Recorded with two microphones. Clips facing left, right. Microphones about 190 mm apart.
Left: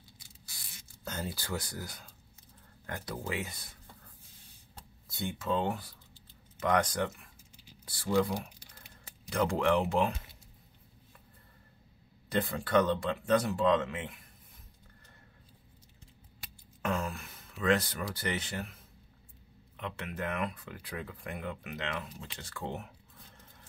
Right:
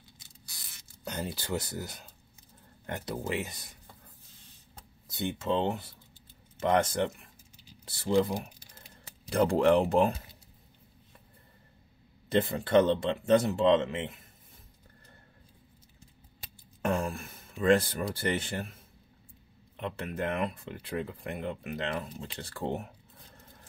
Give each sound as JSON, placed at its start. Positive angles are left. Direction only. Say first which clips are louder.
{"t": 1.0, "sound": "speech", "louder": "right 3 dB", "side_deg": -15}
{"t": 5.0, "sound": "speech", "louder": "right 4 dB", "side_deg": -20}
{"t": 12.3, "sound": "speech", "louder": "right 4 dB", "side_deg": -25}
{"t": 16.8, "sound": "a sound", "louder": "right 4 dB", "side_deg": -30}
{"t": 19.8, "sound": "speech", "louder": "right 4 dB", "side_deg": -30}